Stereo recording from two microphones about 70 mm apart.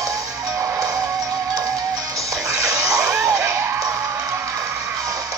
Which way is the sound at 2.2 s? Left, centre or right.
Right.